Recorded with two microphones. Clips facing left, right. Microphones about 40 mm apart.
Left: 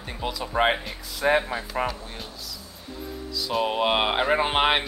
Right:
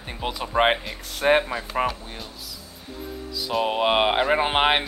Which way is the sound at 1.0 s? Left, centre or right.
Right.